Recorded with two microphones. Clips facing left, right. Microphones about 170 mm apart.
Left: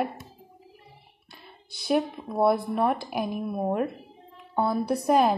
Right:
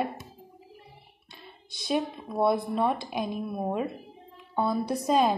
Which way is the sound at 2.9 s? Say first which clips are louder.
Left 2 dB; 65° left (ahead or behind).